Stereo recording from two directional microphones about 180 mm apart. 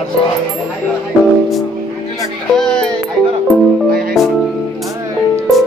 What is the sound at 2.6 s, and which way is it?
Music, 5° left (ahead or behind).